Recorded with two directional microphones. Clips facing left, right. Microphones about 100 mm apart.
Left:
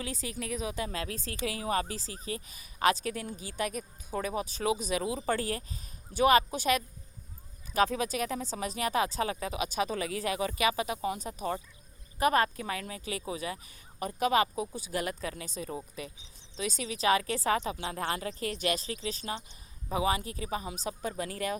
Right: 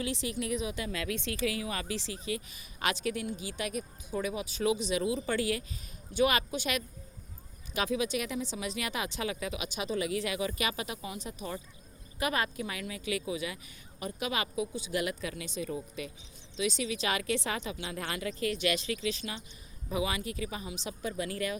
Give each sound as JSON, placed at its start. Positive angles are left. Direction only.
{"t": 0.0, "sound": "a woman's voice", "side_deg": 40}